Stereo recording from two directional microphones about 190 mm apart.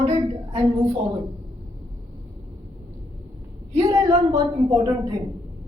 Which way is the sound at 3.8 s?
15° right (ahead or behind).